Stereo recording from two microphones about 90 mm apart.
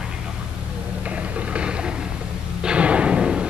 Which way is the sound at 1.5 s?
10° right (ahead or behind).